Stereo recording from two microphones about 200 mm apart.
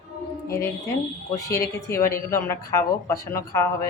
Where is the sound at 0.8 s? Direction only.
15° left (ahead or behind).